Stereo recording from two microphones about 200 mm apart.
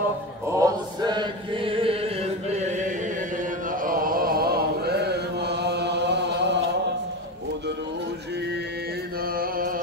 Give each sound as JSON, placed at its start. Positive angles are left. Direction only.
{"t": 0.5, "sound": "chant", "side_deg": -15}
{"t": 3.8, "sound": "chant", "side_deg": -45}